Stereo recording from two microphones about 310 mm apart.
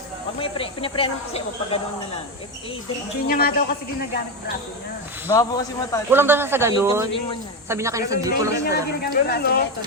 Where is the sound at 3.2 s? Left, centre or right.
Left.